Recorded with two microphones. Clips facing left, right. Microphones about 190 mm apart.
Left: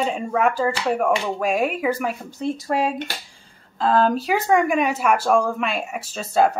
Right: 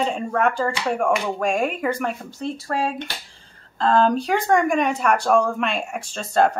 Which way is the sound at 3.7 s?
5° left (ahead or behind).